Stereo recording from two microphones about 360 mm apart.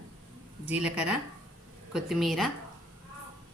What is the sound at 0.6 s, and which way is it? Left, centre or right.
A woman's voice, centre.